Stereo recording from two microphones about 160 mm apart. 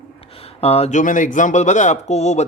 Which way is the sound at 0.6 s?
40° left (ahead or behind).